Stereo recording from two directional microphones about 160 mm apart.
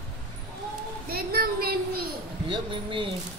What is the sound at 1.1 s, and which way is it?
Child singing, 70° right (ahead or behind).